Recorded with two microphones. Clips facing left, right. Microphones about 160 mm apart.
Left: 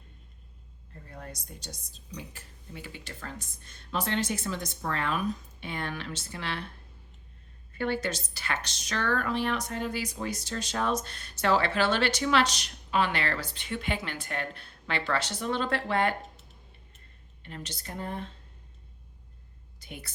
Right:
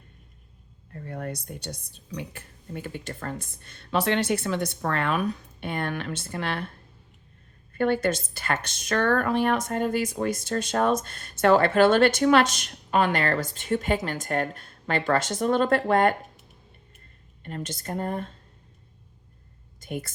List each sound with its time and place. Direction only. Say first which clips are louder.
0.9 s a woman's voice: right 10 dB; 65° right (ahead or behind)
7.7 s speech: right 7 dB; 55° right (ahead or behind)
17.4 s speech: right 7 dB; 50° right (ahead or behind)
19.8 s a sound: right 11 dB; 50° right (ahead or behind)